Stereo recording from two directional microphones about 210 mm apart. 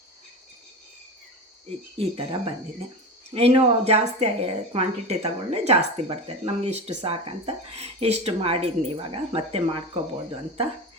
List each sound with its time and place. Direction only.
1.6 s a woman's voice: 25° right (ahead or behind)